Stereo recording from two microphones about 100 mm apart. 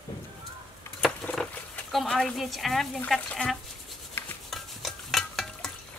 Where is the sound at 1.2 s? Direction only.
10° left (ahead or behind).